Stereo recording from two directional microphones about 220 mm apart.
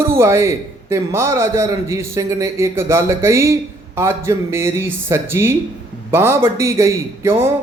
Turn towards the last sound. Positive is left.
turn(degrees=-10)  # may be behind; listen again after turning